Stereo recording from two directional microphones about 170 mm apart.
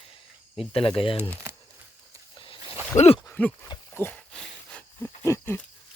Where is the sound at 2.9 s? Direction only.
40° left (ahead or behind).